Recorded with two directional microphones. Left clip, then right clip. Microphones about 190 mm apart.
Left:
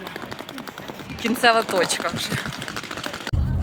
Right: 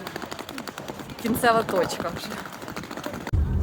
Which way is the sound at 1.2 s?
5° left (ahead or behind).